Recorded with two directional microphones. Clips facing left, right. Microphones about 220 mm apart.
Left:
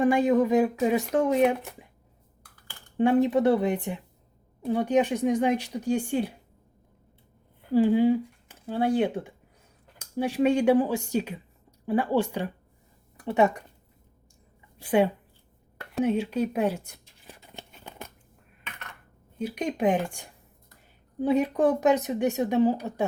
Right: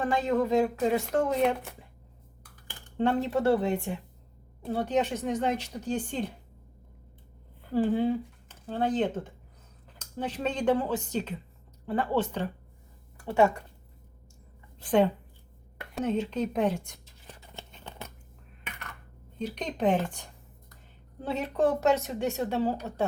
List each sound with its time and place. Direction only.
0.0 s speech: 15° left (ahead or behind)
3.0 s speech: 15° left (ahead or behind)
7.7 s speech: 10° left (ahead or behind)
13.1 s a sound: 20° left (ahead or behind)
14.8 s speech: 10° left (ahead or behind)
17.5 s a sound: 10° left (ahead or behind)
19.4 s speech: 10° left (ahead or behind)